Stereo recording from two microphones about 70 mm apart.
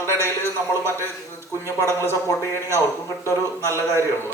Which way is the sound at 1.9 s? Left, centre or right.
Right.